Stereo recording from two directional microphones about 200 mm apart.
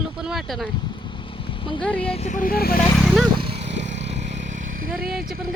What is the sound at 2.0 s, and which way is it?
Speech, 30° left (ahead or behind).